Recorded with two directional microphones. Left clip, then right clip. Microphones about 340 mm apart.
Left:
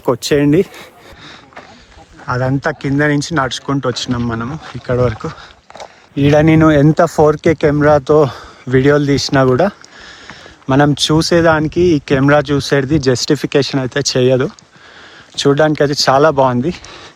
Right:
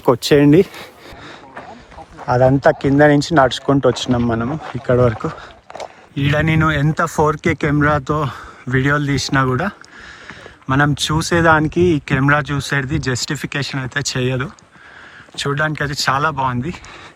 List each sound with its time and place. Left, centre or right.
0.0 s speech: centre
2.2 s speech: centre